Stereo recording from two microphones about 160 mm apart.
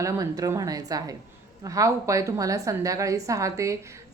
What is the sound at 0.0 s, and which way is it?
A woman's voice, 20° right (ahead or behind).